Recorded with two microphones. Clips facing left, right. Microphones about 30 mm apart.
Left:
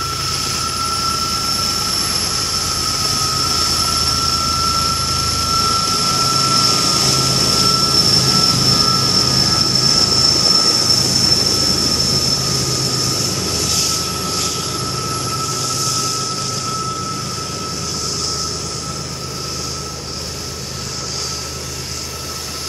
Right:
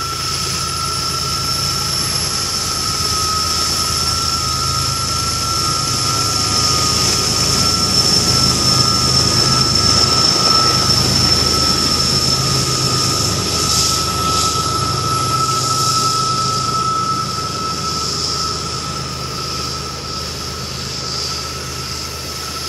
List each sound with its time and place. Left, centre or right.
0.0 s vehicle: centre
7.2 s vehicle: left
10.1 s vehicle: right